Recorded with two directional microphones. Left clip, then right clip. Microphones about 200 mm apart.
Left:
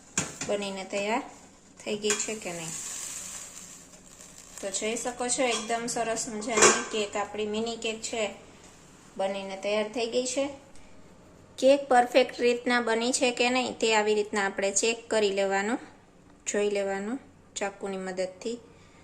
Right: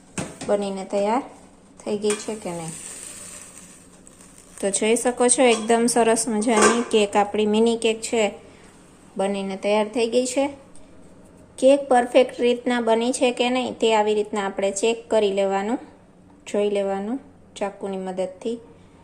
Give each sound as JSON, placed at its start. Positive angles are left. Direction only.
{"t": 0.4, "sound": "speech", "side_deg": -15}
{"t": 4.6, "sound": "a woman's voice", "side_deg": -45}
{"t": 9.1, "sound": "speech", "side_deg": -25}
{"t": 11.6, "sound": "speech", "side_deg": -5}